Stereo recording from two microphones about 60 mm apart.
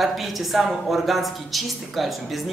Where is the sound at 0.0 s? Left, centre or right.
Centre.